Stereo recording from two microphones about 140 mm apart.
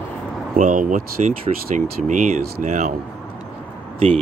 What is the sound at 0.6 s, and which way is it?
Speech, 70° right (ahead or behind).